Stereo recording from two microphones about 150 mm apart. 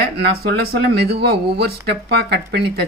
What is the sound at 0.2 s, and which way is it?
Speech, 90° right.